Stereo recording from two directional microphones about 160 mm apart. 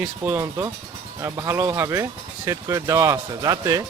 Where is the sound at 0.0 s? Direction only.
15° right (ahead or behind).